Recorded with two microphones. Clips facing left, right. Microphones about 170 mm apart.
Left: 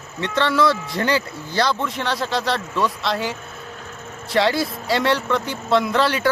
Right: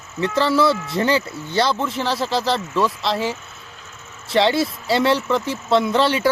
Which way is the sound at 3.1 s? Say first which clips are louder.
Right 2 dB; 30° right (ahead or behind).